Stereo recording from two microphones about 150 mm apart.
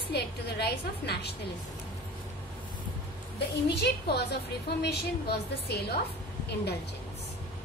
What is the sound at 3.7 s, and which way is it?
A woman's voice, 90° left.